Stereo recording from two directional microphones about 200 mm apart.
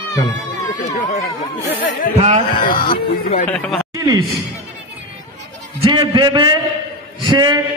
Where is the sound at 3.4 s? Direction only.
5° left (ahead or behind).